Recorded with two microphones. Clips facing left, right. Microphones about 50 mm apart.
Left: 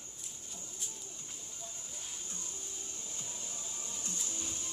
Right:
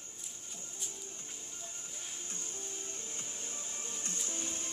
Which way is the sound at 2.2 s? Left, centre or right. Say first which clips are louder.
Right 2 dB; right.